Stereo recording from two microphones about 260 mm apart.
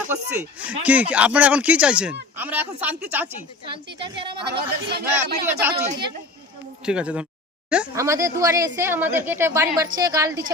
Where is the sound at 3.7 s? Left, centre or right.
Centre.